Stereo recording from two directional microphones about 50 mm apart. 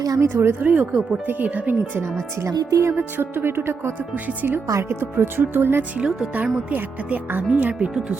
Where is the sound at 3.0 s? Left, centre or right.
Right.